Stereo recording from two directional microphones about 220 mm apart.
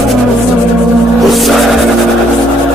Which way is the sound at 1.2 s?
Centre (ahead or behind).